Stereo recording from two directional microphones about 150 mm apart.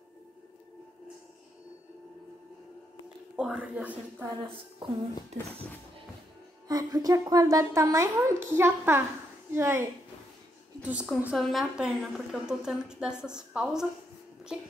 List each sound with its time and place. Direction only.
3.3 s a woman's voice: 10° right (ahead or behind)
4.6 s speech: 35° right (ahead or behind)
6.7 s a woman's voice: 25° right (ahead or behind)
11.2 s a woman's voice: 5° right (ahead or behind)